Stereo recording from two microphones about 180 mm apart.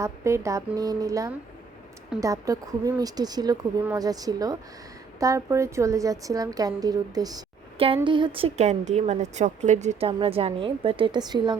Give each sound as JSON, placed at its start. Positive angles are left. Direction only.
{"t": 0.0, "sound": "a woman's voice", "side_deg": -15}